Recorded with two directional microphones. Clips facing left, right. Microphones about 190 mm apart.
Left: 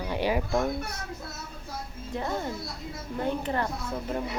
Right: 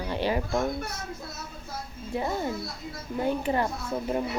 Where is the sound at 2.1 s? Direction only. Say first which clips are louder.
Right 2 dB; 10° right (ahead or behind).